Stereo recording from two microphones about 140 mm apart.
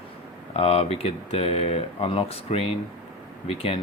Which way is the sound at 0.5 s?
45° left (ahead or behind).